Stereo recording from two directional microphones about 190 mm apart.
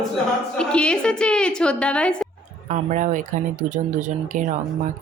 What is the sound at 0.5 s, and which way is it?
A woman's voice, 5° left (ahead or behind).